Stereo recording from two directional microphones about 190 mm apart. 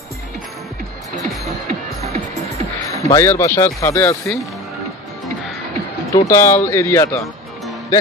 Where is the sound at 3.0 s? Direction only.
15° left (ahead or behind).